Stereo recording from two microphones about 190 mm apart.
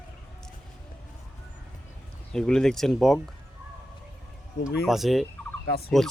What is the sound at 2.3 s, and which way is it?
Speech, 5° left (ahead or behind).